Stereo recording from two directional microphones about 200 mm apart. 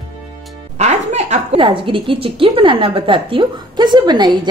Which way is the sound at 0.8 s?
35° right (ahead or behind).